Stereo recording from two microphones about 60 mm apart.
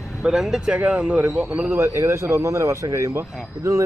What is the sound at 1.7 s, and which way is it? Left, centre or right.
Speech, right.